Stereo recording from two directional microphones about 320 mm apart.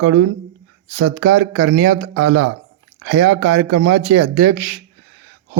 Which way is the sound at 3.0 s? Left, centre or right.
Right.